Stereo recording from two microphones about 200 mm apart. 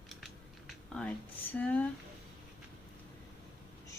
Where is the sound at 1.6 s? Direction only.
5° left (ahead or behind).